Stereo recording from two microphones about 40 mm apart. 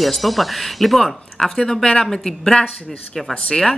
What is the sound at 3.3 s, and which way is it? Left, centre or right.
Speech, left.